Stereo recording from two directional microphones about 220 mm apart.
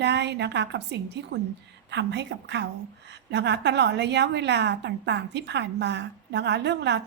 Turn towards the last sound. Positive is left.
turn(degrees=-50)  # may be behind; listen again after turning